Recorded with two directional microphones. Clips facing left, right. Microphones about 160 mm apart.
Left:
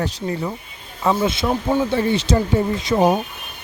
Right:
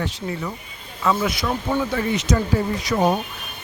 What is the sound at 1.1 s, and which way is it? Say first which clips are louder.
Speech: left 3 dB; 25° left (ahead or behind).